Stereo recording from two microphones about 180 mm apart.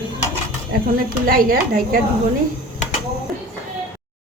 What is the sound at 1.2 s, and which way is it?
Speech, 50° right (ahead or behind).